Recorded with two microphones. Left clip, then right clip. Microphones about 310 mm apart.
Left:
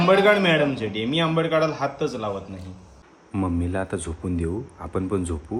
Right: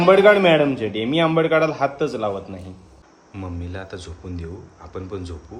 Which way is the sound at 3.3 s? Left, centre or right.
Centre.